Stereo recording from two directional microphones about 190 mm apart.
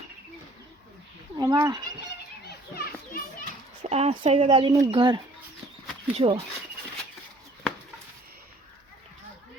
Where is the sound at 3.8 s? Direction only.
35° right (ahead or behind).